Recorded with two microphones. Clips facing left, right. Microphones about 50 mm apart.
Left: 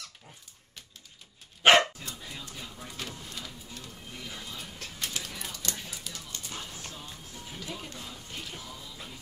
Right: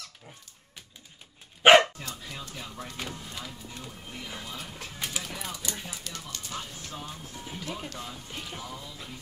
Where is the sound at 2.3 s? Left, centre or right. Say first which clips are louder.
Right 3 dB; right.